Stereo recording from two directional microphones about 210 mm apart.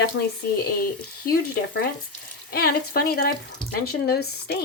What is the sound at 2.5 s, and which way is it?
Speech, 45° left (ahead or behind).